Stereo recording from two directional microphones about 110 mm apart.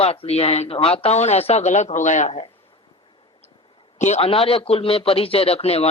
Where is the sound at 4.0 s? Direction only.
80° left.